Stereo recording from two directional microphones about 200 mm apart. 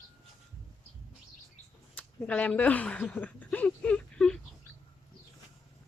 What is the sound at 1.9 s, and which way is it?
Speech, 5° left (ahead or behind).